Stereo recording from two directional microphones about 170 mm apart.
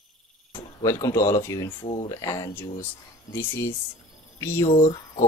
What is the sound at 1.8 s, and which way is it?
Speech, 35° left (ahead or behind).